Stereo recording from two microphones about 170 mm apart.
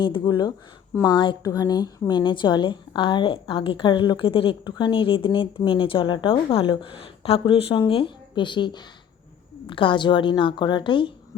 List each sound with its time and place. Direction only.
0.0 s a woman's voice: 25° left (ahead or behind)